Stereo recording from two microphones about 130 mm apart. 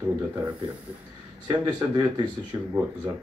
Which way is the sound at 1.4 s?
35° right (ahead or behind).